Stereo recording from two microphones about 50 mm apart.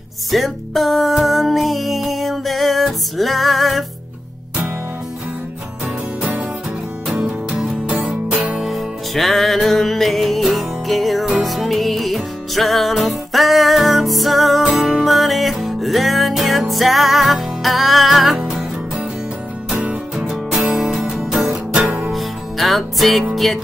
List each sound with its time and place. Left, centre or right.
0.3 s music: centre
7.2 s music: centre
8.5 s music: centre
19.8 s music: right
20.2 s music: centre
21.7 s music: right
22.1 s music: centre